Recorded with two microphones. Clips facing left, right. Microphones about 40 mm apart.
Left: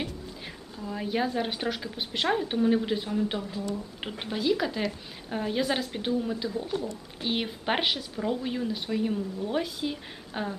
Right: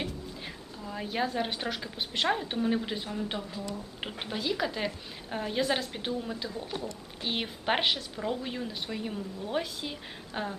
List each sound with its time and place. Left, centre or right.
0.0 s a woman's voice: centre